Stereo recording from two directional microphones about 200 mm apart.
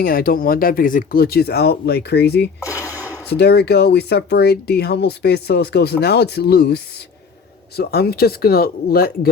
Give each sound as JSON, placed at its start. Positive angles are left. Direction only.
{"t": 0.0, "sound": "speech", "side_deg": 45}
{"t": 2.6, "sound": "a sound", "side_deg": 15}
{"t": 3.2, "sound": "speech", "side_deg": 55}